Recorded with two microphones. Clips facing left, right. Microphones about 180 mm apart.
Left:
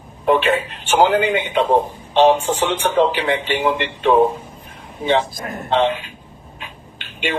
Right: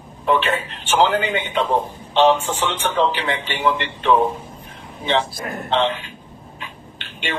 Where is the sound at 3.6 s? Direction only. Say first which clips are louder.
Left 2 dB; 15° left (ahead or behind).